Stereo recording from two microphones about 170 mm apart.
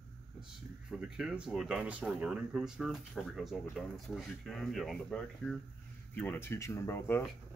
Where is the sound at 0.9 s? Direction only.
5° right (ahead or behind); by 7.2 s 15° left (ahead or behind).